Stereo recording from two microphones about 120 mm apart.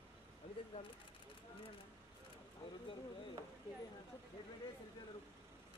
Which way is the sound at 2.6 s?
45° left (ahead or behind).